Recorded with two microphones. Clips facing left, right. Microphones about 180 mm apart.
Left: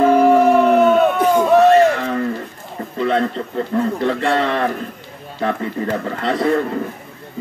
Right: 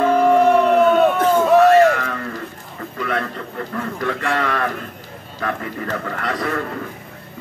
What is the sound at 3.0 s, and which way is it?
Speech, 25° left (ahead or behind).